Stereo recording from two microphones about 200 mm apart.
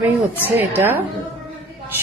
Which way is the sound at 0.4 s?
10° right (ahead or behind).